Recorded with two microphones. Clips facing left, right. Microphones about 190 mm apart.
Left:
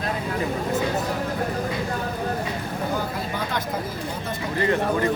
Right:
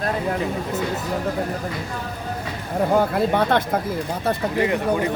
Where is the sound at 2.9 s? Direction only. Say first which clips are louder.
Right 9 dB; 65° right (ahead or behind).